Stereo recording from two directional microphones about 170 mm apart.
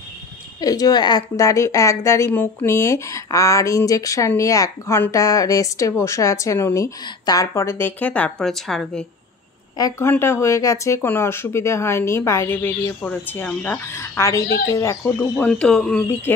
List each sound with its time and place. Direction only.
0.6 s a woman's voice: 20° left (ahead or behind); by 9.0 s 5° left (ahead or behind)
9.8 s a woman's voice: 20° left (ahead or behind)
15.1 s speech: 5° left (ahead or behind)